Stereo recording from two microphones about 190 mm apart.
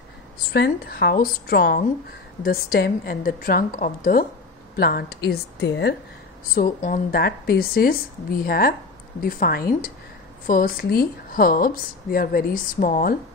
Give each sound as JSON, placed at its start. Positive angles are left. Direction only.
{"t": 0.5, "sound": "a woman's voice", "side_deg": 55}
{"t": 6.5, "sound": "speech", "side_deg": 45}